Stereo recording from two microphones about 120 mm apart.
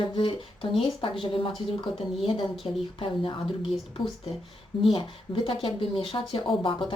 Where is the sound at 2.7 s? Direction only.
45° left (ahead or behind).